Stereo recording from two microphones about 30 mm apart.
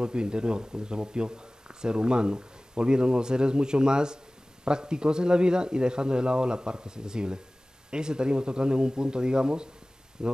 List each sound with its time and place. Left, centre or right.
0.0 s speech: right